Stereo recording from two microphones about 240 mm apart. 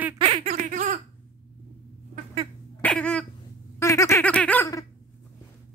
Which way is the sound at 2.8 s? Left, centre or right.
Centre.